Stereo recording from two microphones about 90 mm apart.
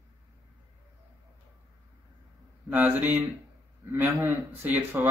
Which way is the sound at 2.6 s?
20° right (ahead or behind).